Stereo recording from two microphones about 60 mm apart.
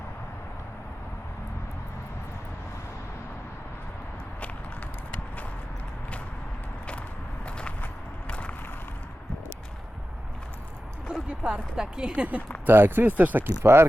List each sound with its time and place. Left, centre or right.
7.4 s a sound: centre
11.3 s speech: centre
12.6 s speech: right
13.6 s mechanisms: right